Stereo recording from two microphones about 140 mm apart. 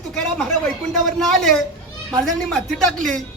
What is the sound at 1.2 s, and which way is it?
A woman's voice, 5° left (ahead or behind).